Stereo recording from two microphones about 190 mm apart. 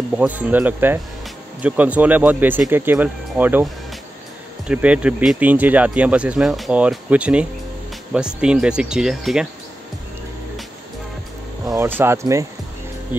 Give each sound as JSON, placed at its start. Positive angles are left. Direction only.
{"t": 0.1, "sound": "speech", "side_deg": -5}
{"t": 4.6, "sound": "speech", "side_deg": -5}
{"t": 11.6, "sound": "speech", "side_deg": -15}